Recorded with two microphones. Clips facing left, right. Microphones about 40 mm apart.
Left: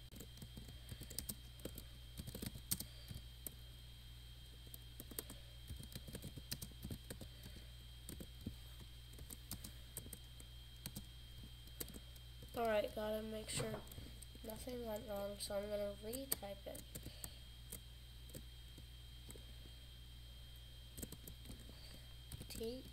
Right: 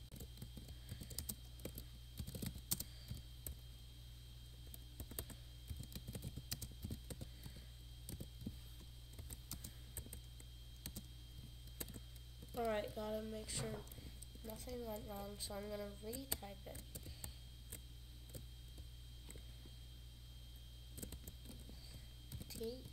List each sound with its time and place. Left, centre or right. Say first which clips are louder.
2.4 s computer keyboard: right 1 dB; centre
6.5 s clip-clop: left 1 dB; centre
12.5 s speech: left 3 dB; centre
22.6 s speech: even; left